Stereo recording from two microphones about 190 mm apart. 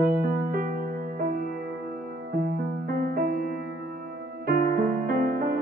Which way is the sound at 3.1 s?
50° right (ahead or behind).